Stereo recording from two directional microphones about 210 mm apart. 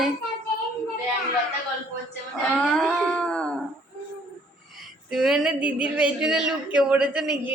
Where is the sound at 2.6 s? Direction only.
5° left (ahead or behind).